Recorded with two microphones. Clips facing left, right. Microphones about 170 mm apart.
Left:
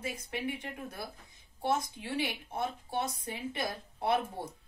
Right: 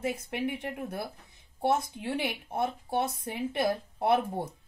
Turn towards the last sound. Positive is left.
turn(degrees=-60)  # may be behind; listen again after turning